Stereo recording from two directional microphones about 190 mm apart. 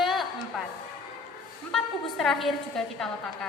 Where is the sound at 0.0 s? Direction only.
Centre (ahead or behind).